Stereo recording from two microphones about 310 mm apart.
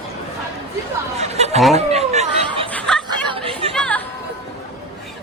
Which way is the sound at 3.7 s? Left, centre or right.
Centre.